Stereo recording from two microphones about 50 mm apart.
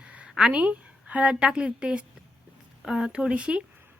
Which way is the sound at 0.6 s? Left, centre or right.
Right.